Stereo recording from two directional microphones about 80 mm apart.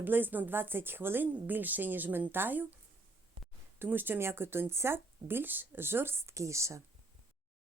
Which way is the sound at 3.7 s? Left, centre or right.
Right.